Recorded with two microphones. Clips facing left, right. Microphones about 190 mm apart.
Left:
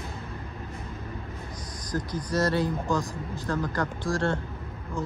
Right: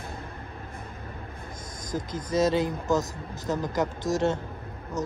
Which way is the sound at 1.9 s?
25° right (ahead or behind).